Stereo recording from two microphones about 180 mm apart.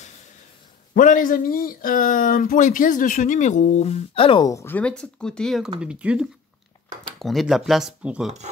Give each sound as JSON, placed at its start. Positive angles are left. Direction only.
{"t": 0.9, "sound": "speech", "side_deg": 50}